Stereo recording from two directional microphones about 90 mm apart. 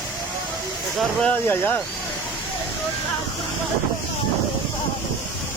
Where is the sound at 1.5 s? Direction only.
20° left (ahead or behind).